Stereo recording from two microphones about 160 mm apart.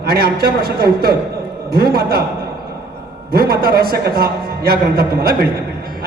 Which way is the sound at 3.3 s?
70° right (ahead or behind).